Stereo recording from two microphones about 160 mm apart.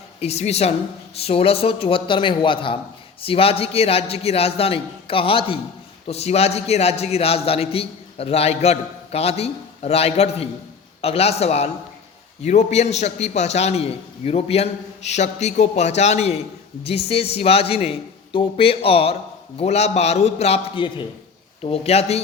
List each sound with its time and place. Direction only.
0.2 s a man's voice: 40° left (ahead or behind)